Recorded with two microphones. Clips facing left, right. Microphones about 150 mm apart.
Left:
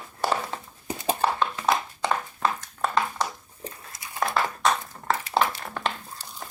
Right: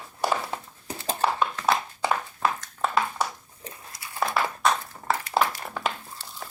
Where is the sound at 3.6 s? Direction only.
20° left (ahead or behind).